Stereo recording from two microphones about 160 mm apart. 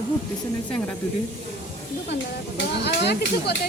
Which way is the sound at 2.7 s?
90° left.